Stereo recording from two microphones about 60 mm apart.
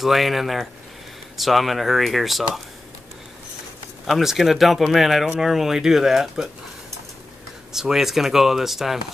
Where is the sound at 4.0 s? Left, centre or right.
Centre.